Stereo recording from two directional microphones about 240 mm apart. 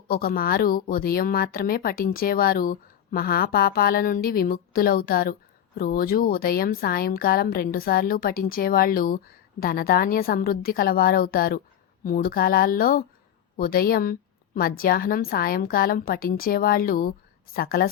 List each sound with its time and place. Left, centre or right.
0.1 s a woman's voice: left